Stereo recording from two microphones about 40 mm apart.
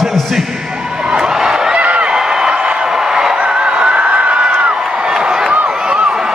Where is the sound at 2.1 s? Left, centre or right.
Centre.